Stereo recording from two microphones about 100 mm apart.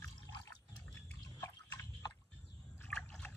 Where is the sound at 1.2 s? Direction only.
30° left (ahead or behind).